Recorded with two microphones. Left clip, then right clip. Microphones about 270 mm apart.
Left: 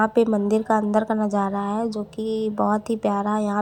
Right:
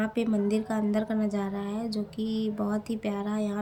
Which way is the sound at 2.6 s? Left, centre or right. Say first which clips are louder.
Left 10 dB; left.